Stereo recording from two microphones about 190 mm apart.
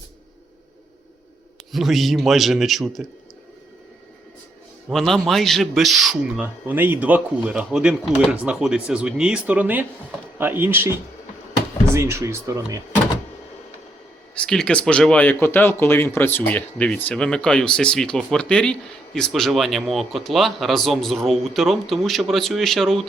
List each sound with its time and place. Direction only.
1.7 s speech: centre (ahead or behind)
4.9 s speech: centre (ahead or behind)
11.9 s speech: 15° right (ahead or behind)
14.3 s speech: 5° left (ahead or behind)